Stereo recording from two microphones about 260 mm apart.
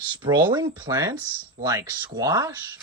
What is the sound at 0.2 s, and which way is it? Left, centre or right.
Speech, centre.